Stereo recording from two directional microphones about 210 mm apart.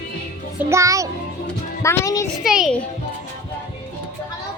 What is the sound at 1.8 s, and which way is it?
Music, 15° left (ahead or behind).